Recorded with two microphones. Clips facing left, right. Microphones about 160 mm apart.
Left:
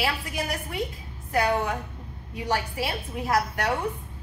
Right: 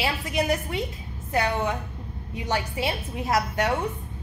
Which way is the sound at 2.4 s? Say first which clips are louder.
Even; 20° right (ahead or behind).